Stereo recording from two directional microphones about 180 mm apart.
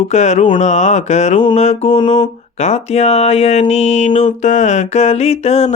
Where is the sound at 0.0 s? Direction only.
40° left (ahead or behind).